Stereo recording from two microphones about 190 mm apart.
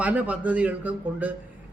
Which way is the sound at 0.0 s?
10° right (ahead or behind).